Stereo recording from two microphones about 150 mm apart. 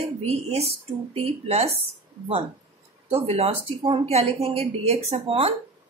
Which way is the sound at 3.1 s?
40° right (ahead or behind).